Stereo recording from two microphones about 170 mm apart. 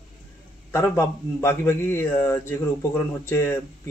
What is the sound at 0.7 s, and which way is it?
A man's voice, 15° left (ahead or behind).